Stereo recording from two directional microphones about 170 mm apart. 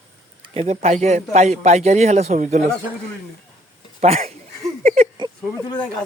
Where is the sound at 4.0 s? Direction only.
40° right (ahead or behind).